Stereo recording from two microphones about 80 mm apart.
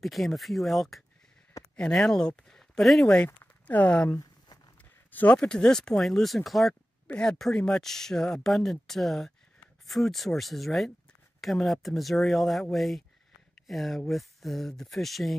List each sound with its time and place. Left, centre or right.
0.0 s speech: centre
3.6 s speech: centre